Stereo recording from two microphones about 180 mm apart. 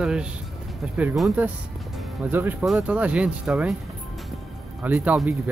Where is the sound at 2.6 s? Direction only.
5° right (ahead or behind).